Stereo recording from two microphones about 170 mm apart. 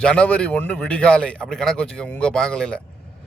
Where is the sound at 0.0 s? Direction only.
5° left (ahead or behind).